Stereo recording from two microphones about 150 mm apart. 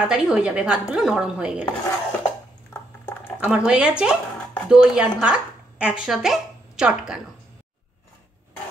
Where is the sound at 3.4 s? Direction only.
5° right (ahead or behind).